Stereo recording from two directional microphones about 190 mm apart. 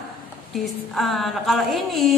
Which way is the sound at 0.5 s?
Centre (ahead or behind).